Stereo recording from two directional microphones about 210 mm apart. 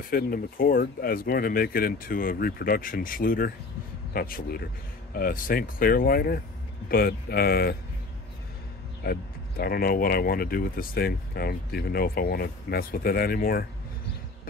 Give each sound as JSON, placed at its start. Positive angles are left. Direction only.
{"t": 0.1, "sound": "speech", "side_deg": 45}
{"t": 9.0, "sound": "speech", "side_deg": 45}